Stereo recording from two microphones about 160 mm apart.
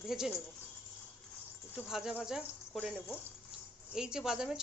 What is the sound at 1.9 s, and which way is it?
A woman's voice, 5° right (ahead or behind).